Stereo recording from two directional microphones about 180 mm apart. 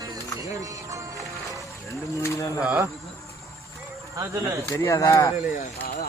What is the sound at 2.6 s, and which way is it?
Speech, 10° right (ahead or behind).